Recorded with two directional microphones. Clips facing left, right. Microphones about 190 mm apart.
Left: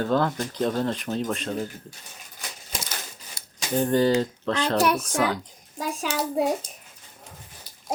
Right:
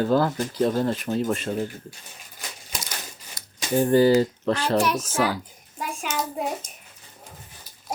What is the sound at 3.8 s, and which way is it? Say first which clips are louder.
A woman's voice: right 4 dB; 10° right (ahead or behind).